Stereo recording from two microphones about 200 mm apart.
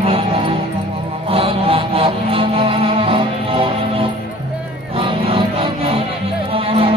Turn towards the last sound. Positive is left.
turn(degrees=-30)  # may be behind; listen again after turning